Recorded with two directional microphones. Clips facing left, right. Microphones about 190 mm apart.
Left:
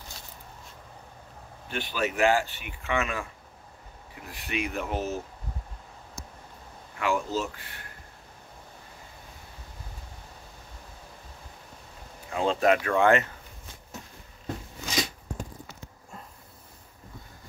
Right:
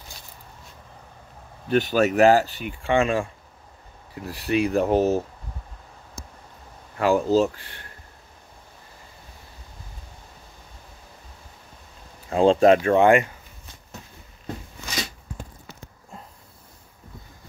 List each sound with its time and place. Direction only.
1.7 s speech: 45° right (ahead or behind)
7.0 s speech: 35° right (ahead or behind)
12.3 s speech: 30° right (ahead or behind); by 13.3 s 15° right (ahead or behind)